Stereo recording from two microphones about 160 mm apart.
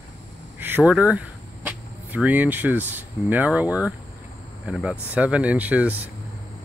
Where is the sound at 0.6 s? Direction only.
15° right (ahead or behind).